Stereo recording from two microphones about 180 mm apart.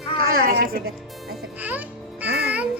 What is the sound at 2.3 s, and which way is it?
Music, 65° right (ahead or behind).